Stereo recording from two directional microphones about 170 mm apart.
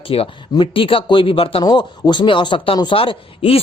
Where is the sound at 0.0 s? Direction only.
35° left (ahead or behind).